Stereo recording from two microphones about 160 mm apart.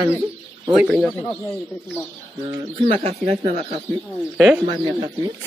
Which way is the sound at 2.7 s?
40° right (ahead or behind).